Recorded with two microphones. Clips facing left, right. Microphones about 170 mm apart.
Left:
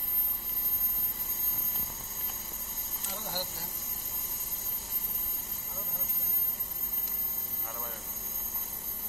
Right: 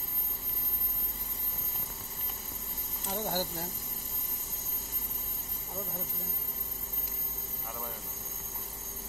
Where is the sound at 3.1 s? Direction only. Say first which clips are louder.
Right 6 dB; 55° right (ahead or behind).